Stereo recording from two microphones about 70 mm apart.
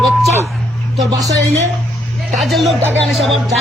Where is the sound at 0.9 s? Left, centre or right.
Right.